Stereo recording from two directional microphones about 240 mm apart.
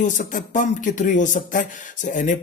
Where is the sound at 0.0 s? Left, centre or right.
Left.